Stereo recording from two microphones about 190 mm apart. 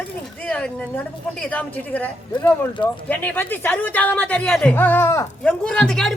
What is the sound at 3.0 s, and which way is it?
Speech, 10° left (ahead or behind).